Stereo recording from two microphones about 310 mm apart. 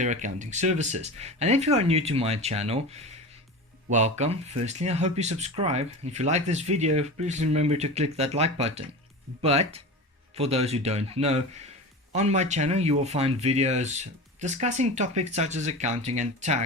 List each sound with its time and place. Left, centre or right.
0.0 s speech: right